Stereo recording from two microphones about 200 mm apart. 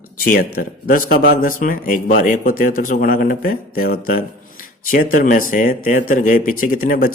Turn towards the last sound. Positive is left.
turn(degrees=45)  # may be behind; listen again after turning